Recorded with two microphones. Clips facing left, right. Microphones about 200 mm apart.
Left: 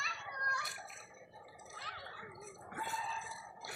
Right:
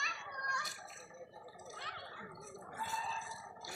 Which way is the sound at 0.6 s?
60° left (ahead or behind).